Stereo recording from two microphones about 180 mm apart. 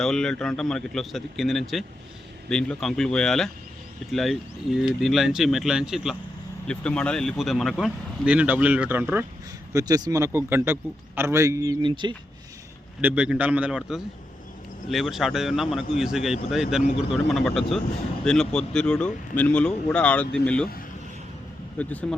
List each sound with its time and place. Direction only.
0.0 s speech: 5° left (ahead or behind)
9.7 s a man's voice: 20° right (ahead or behind)
13.0 s a man's voice: 10° right (ahead or behind)
21.8 s speech: 10° left (ahead or behind)